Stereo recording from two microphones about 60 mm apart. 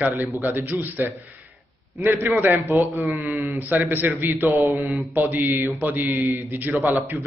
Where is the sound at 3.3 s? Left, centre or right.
Right.